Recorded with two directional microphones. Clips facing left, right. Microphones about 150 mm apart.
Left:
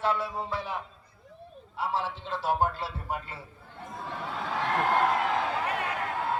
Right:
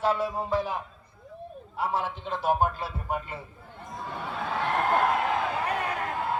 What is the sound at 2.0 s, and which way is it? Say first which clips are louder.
Speech: right 2 dB; 15° right (ahead or behind).